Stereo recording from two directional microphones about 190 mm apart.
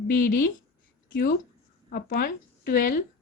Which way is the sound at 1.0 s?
50° left (ahead or behind).